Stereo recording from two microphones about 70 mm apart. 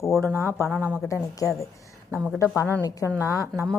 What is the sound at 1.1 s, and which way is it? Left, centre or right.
Speech, left.